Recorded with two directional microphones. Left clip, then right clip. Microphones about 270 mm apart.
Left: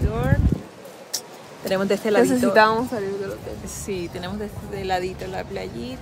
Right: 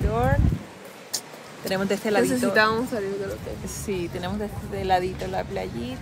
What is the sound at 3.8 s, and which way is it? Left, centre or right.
Speech, centre.